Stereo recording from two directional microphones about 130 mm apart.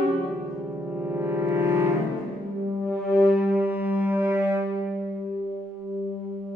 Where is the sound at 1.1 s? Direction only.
15° right (ahead or behind).